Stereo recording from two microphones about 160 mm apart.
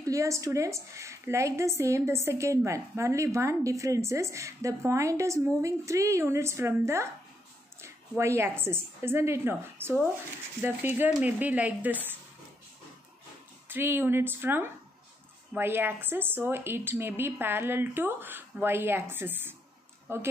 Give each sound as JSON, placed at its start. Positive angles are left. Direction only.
{"t": 0.0, "sound": "a woman's voice", "side_deg": -20}
{"t": 13.7, "sound": "a woman's voice", "side_deg": -15}